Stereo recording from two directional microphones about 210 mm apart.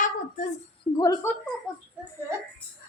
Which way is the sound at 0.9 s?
20° left (ahead or behind).